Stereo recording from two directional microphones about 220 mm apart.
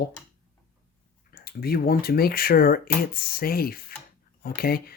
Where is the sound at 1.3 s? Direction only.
45° left (ahead or behind).